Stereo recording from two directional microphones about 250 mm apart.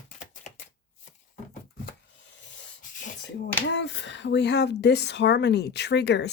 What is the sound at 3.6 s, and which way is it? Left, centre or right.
Speech, left.